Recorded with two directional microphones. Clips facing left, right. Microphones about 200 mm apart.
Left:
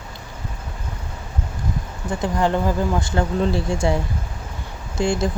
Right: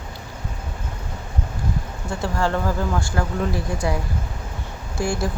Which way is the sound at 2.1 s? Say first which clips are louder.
Left 3 dB; 20° left (ahead or behind).